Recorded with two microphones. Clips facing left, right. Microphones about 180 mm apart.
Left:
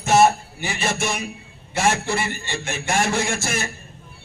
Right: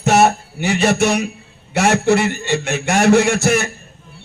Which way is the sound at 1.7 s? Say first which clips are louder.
Right 7 dB; 65° right (ahead or behind).